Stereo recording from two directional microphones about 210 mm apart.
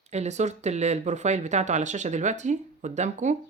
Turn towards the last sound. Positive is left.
turn(degrees=-35)  # may be behind; listen again after turning